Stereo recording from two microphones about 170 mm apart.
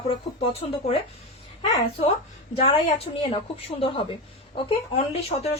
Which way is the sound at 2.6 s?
30° left (ahead or behind).